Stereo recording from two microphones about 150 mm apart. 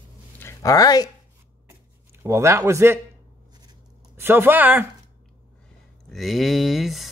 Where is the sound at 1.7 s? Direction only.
15° right (ahead or behind).